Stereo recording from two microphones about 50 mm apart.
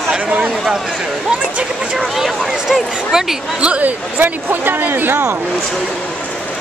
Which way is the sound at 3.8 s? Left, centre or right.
Right.